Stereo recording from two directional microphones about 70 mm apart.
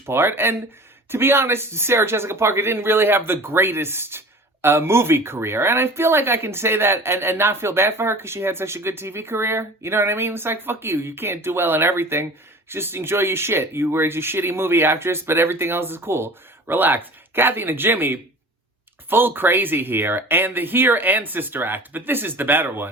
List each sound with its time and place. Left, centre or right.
0.0 s speech: right